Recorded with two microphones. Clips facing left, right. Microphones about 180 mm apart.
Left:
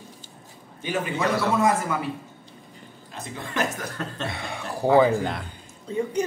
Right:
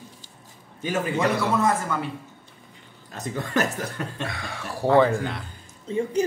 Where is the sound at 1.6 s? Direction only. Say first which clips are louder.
Left 1 dB; 5° left (ahead or behind).